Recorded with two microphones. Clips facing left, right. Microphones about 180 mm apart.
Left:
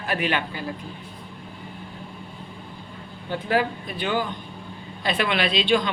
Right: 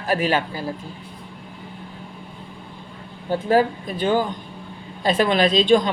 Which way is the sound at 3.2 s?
40° right (ahead or behind).